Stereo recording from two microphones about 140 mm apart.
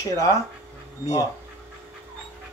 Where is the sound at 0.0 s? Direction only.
25° left (ahead or behind).